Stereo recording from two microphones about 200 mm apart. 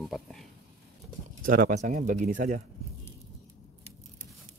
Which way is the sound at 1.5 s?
40° right (ahead or behind).